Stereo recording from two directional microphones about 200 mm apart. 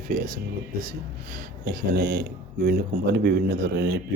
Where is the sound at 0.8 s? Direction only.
45° right (ahead or behind).